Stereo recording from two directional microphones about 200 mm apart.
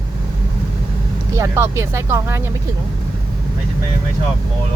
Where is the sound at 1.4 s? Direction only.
15° right (ahead or behind).